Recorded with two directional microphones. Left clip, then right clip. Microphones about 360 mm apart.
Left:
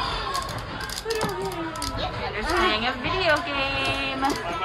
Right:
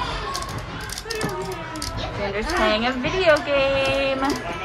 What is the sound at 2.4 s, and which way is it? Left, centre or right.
A woman's voice, centre.